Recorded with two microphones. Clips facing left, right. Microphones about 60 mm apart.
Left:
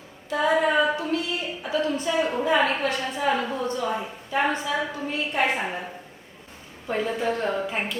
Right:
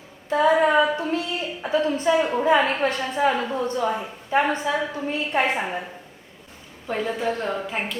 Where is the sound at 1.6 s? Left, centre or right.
Right.